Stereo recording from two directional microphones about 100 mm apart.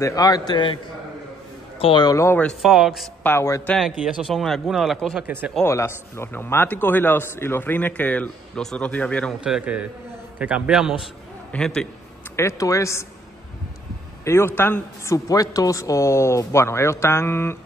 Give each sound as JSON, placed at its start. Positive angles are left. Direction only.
{"t": 0.0, "sound": "a man's voice", "side_deg": 40}
{"t": 1.8, "sound": "a man's voice", "side_deg": 65}
{"t": 2.0, "sound": "a man's voice", "side_deg": 30}
{"t": 2.6, "sound": "a man's voice", "side_deg": -5}
{"t": 3.3, "sound": "a man's voice", "side_deg": 30}
{"t": 3.7, "sound": "a man's voice", "side_deg": 0}
{"t": 5.2, "sound": "a man's voice", "side_deg": -20}
{"t": 5.6, "sound": "a man's voice", "side_deg": 25}
{"t": 9.4, "sound": "a man's voice", "side_deg": -10}
{"t": 11.5, "sound": "speech", "side_deg": 10}
{"t": 12.4, "sound": "a man's voice", "side_deg": 30}
{"t": 14.2, "sound": "a man's voice", "side_deg": 25}
{"t": 15.1, "sound": "a man's voice", "side_deg": 35}